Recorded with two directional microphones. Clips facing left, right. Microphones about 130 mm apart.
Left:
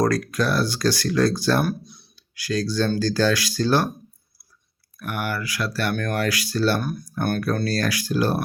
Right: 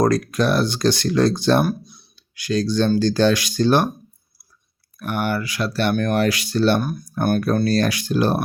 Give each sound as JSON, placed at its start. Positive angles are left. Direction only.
{"t": 0.0, "sound": "speech", "side_deg": -20}
{"t": 4.9, "sound": "speech", "side_deg": -25}